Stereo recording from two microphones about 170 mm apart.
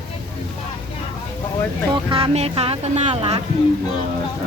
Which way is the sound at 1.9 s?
30° right (ahead or behind).